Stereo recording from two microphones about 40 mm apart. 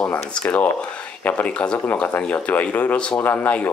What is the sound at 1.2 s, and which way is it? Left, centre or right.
Speech, left.